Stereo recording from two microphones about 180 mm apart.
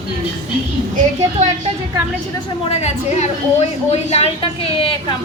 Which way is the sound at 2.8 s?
35° left (ahead or behind).